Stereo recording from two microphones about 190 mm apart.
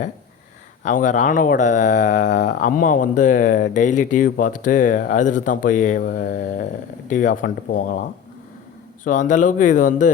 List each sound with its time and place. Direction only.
0.9 s speech: 40° left (ahead or behind)
9.0 s speech: 40° left (ahead or behind)